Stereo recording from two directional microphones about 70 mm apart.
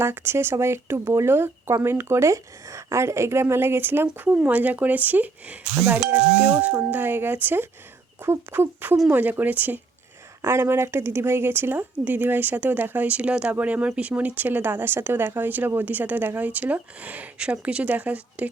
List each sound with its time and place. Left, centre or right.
0.0 s speech: right
10.4 s speech: right